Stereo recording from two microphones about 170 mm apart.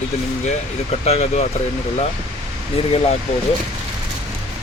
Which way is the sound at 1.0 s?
35° left (ahead or behind).